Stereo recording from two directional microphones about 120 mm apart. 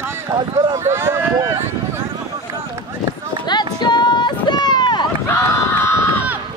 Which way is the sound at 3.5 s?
35° left (ahead or behind).